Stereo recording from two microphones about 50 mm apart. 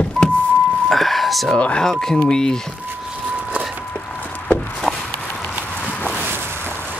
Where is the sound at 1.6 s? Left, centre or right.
Left.